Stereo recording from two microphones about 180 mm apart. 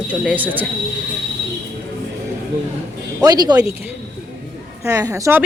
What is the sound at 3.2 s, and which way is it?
Speech, 20° right (ahead or behind).